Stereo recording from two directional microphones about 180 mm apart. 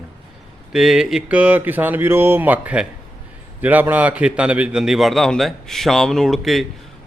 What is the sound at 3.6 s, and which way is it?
Speech, 10° right (ahead or behind).